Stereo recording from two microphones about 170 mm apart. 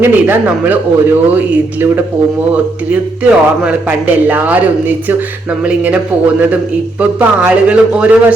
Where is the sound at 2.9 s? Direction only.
5° right (ahead or behind).